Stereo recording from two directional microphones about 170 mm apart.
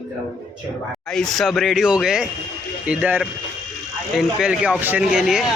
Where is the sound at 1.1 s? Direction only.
5° left (ahead or behind).